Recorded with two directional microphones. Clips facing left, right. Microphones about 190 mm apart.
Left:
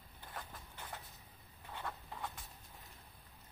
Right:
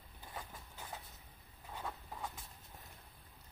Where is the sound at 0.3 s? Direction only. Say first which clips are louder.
Even; 10° right (ahead or behind).